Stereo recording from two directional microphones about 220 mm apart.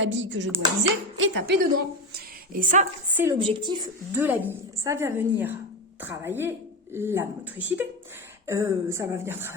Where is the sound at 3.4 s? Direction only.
20° right (ahead or behind).